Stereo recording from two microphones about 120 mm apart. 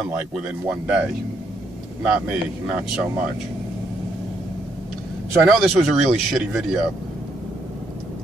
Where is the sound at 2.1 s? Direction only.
10° right (ahead or behind).